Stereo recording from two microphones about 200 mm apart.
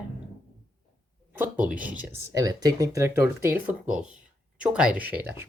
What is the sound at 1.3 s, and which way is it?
Speech, 10° right (ahead or behind).